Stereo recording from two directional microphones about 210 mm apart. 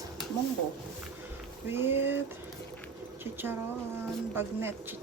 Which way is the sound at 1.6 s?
10° right (ahead or behind).